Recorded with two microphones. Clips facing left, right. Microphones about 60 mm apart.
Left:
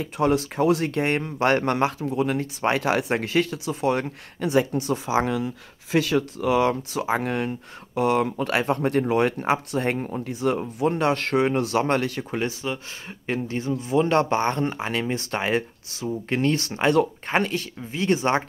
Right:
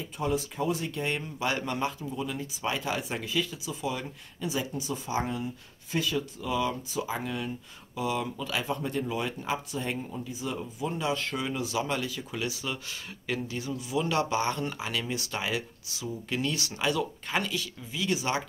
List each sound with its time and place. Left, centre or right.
0.0 s speech: left